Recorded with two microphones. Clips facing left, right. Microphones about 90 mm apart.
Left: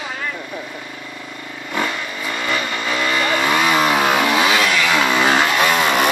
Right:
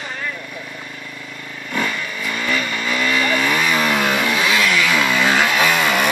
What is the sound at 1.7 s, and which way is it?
Vehicle, 20° left (ahead or behind).